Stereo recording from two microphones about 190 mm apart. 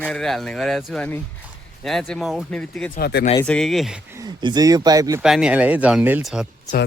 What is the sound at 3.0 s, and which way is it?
Speech, 55° left (ahead or behind).